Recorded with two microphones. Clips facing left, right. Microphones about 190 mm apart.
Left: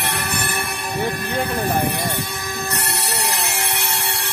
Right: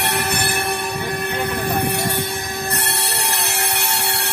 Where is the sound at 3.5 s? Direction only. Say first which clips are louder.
Right 2 dB; 65° right (ahead or behind).